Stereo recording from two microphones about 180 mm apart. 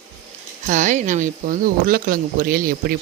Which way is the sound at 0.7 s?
45° right (ahead or behind).